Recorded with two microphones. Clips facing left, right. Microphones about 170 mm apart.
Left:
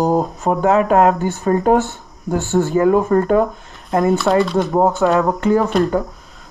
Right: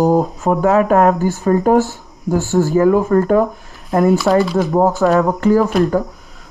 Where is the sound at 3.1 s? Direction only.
35° left (ahead or behind).